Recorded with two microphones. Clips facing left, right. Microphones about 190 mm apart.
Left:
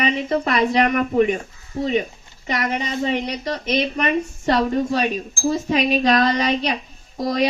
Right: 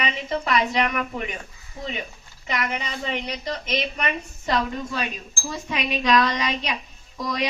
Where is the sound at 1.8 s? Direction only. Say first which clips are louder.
Left 10 dB; 30° left (ahead or behind).